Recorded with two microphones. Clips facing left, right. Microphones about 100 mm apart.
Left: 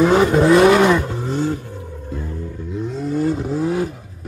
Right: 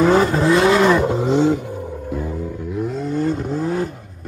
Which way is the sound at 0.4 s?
25° left (ahead or behind).